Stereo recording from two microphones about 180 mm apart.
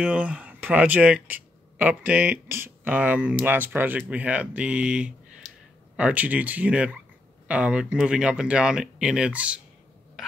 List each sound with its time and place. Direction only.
0.0 s speech: 5° right (ahead or behind)
5.4 s a sound: 20° left (ahead or behind)
5.9 s speech: 10° right (ahead or behind)